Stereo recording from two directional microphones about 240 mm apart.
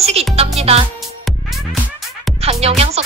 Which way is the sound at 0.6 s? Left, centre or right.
Right.